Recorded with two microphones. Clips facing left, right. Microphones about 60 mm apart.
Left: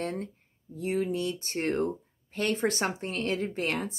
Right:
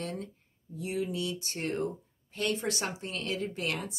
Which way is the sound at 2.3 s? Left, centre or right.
Left.